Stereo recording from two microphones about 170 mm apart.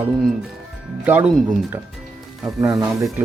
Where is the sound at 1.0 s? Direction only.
10° right (ahead or behind).